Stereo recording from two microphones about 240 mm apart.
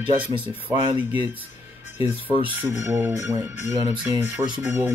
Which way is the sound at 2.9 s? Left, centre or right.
Centre.